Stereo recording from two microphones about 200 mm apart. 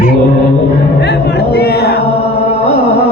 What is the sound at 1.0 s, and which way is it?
Speech, 55° left (ahead or behind).